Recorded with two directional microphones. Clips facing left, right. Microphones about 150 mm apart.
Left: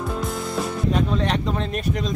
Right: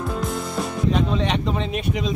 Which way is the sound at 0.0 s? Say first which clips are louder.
Right 1 dB; centre (ahead or behind).